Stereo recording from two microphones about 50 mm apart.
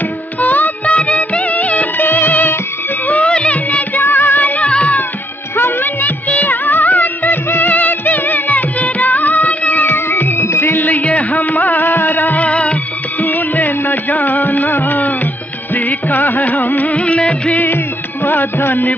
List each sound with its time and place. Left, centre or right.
0.4 s music: left
0.9 s music of bollywood: left
3.1 s music: left
4.0 s music: left
6.5 s music of bollywood: left
9.9 s music: left
10.4 s music: left
10.8 s music: left
18.2 s music: left